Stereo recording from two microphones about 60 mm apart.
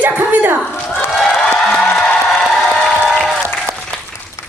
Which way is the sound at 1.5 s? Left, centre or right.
Centre.